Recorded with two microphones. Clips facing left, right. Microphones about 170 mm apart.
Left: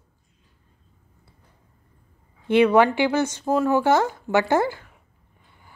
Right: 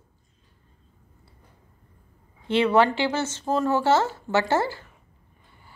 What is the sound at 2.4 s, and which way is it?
Speech, 15° left (ahead or behind).